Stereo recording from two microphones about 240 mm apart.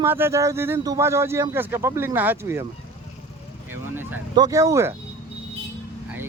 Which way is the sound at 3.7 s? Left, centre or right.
Centre.